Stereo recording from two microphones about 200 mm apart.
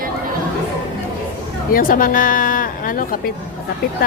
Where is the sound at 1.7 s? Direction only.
45° left (ahead or behind).